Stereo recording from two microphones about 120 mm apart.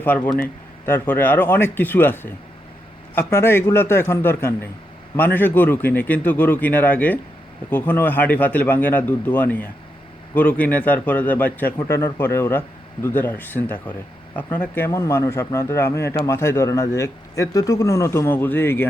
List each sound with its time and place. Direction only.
0.0 s a man's voice: 10° left (ahead or behind)
14.8 s a man's voice: 25° left (ahead or behind)